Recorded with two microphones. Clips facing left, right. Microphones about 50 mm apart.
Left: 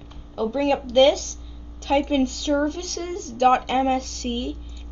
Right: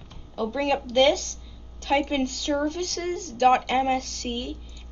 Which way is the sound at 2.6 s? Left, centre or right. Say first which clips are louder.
Left 1 dB; centre.